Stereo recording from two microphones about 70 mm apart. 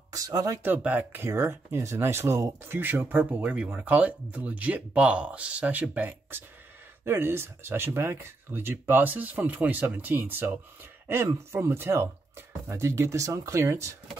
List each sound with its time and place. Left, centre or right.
0.1 s speech: right
0.6 s speech: right